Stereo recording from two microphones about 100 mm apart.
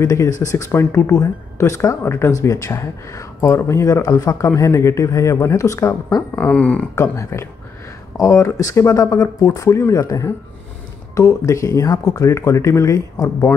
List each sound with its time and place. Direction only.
0.0 s speech: 35° left (ahead or behind)
6.3 s speech: 15° left (ahead or behind)
7.0 s speech: 30° left (ahead or behind)